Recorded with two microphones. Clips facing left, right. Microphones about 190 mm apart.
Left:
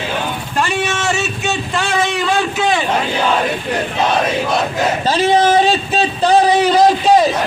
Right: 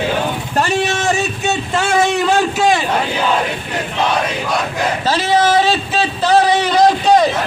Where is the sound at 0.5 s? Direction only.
40° right (ahead or behind).